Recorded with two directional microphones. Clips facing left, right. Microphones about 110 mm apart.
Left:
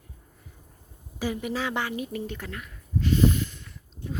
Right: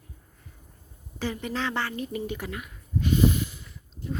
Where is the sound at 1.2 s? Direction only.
5° left (ahead or behind).